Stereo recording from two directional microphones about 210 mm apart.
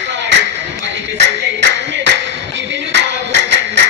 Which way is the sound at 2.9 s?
55° right (ahead or behind).